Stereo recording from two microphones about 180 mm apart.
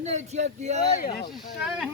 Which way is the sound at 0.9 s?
50° left (ahead or behind).